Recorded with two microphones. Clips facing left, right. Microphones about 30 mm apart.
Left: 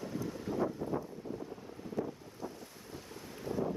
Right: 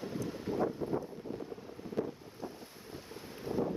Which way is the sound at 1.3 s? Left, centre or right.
Right.